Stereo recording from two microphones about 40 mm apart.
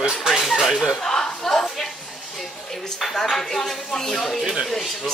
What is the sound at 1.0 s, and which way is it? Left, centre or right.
Chuckle, centre.